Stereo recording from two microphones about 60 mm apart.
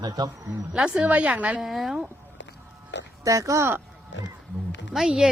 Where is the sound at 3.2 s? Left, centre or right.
Right.